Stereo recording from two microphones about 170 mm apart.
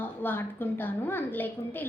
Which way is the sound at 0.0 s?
10° left (ahead or behind).